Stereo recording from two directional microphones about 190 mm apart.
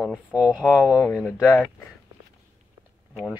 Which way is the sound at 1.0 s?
5° left (ahead or behind).